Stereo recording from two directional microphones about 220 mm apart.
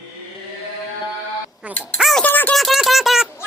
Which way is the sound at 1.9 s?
Centre (ahead or behind).